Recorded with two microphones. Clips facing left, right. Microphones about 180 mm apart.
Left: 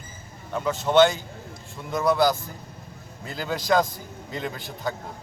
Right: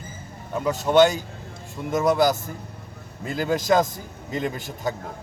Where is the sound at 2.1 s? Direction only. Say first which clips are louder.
Right 1 dB; 45° right (ahead or behind).